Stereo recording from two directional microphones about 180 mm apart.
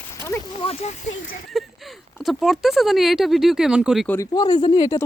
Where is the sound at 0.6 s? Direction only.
35° left (ahead or behind).